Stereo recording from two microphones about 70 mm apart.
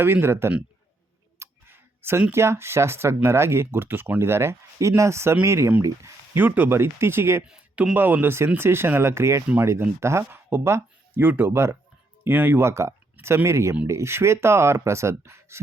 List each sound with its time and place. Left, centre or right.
0.0 s speech: right
1.4 s a sound: right
2.3 s speech: right
6.3 s speech: right
6.7 s speech: right
7.4 s speech: centre
7.9 s speech: right